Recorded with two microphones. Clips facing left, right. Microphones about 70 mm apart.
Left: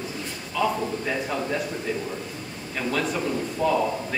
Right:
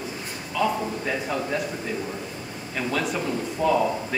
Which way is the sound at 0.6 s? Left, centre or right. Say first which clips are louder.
Even; centre.